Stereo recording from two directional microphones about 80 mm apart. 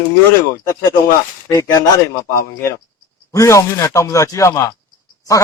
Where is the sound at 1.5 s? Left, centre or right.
Left.